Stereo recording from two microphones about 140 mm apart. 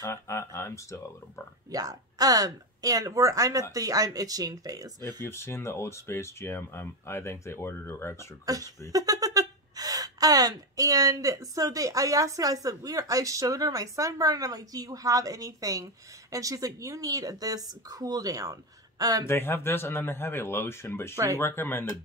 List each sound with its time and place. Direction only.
0.0 s speech: 20° left (ahead or behind)
1.7 s speech: 25° right (ahead or behind)
5.0 s speech: 20° left (ahead or behind)
8.5 s speech: 25° right (ahead or behind)
19.2 s speech: 15° left (ahead or behind)